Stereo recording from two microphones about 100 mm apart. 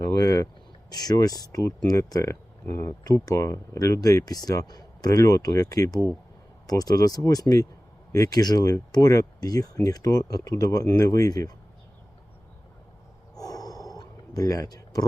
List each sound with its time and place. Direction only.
0.0 s vehicle: 35° left (ahead or behind)
0.9 s speech: 40° left (ahead or behind)
13.4 s a sound: 40° left (ahead or behind)